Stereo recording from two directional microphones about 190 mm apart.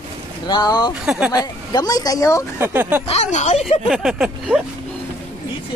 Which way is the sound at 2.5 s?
10° right (ahead or behind).